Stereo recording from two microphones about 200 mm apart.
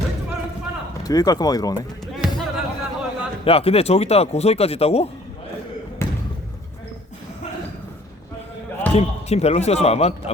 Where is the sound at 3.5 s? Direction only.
30° left (ahead or behind).